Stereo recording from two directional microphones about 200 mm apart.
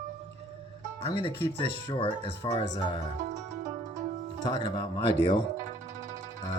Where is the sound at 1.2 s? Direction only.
25° left (ahead or behind).